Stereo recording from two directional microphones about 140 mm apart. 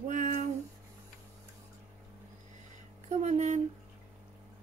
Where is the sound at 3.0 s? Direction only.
55° right (ahead or behind).